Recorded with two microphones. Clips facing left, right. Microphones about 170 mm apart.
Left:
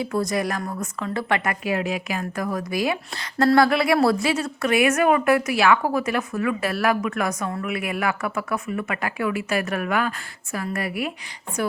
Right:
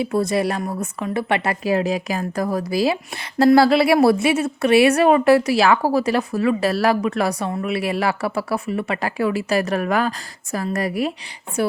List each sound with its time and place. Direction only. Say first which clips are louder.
0.0 s a woman's voice: right 4 dB; 25° right (ahead or behind)
1.5 s a woman's voice: right 5 dB; 35° right (ahead or behind)